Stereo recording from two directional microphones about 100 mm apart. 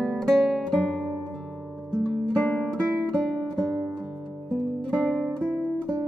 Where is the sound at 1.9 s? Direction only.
10° left (ahead or behind).